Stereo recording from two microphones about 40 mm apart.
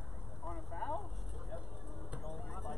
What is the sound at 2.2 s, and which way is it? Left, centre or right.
Vehicle, centre.